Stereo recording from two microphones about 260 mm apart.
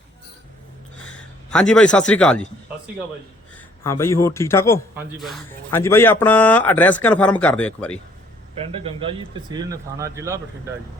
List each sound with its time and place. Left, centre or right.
1.5 s speech: centre
3.8 s speech: centre
4.9 s speech: centre
8.5 s a man's voice: right